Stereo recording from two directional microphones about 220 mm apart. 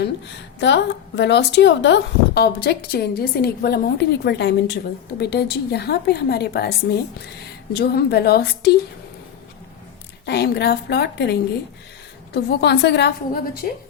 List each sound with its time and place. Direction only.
0.0 s a woman's voice: 50° left (ahead or behind)
10.2 s a woman's voice: 50° left (ahead or behind)